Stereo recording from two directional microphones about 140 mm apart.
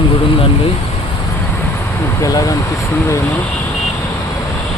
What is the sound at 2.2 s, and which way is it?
Speech, 25° left (ahead or behind).